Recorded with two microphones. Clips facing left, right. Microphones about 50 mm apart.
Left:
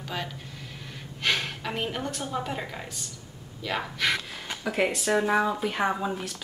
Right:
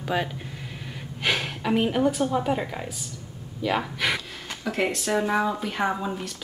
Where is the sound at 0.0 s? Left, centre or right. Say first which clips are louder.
Right 7 dB; centre.